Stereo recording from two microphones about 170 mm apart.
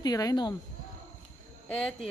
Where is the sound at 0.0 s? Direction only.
20° left (ahead or behind).